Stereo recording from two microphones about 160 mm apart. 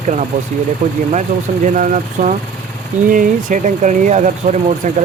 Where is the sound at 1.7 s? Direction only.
55° right (ahead or behind).